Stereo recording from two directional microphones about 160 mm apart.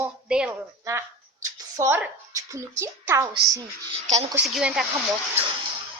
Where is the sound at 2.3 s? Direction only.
20° right (ahead or behind).